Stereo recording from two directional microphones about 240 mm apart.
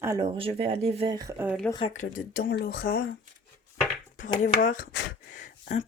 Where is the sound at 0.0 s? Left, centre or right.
Centre.